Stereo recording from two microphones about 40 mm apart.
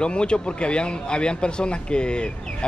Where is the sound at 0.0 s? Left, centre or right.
Left.